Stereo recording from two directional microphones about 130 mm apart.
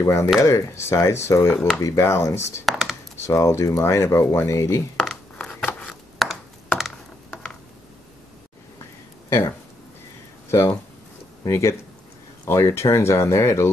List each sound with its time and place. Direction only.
0.0 s speech: 25° left (ahead or behind)
2.6 s computer keyboard: centre (ahead or behind)
3.3 s speech: 25° left (ahead or behind)
4.9 s a sound: 5° left (ahead or behind)
11.4 s speech: 20° left (ahead or behind)